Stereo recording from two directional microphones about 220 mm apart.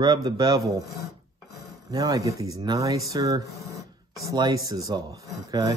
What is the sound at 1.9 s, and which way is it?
Speech, 15° right (ahead or behind).